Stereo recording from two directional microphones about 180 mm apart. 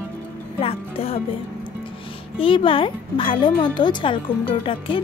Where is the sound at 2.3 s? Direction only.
30° left (ahead or behind).